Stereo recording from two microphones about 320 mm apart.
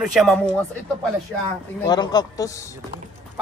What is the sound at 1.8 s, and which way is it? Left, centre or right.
Speech, centre.